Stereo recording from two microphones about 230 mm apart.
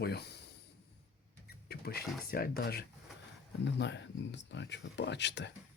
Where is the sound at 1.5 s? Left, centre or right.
Left.